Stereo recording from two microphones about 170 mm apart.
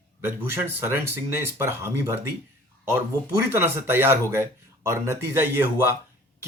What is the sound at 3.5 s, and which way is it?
Speech, 15° right (ahead or behind).